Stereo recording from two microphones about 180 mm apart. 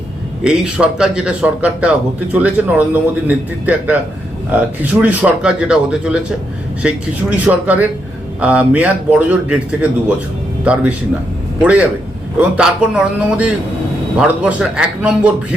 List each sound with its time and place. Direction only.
0.4 s a man's voice: 5° right (ahead or behind)
10.6 s a man's voice: 5° right (ahead or behind)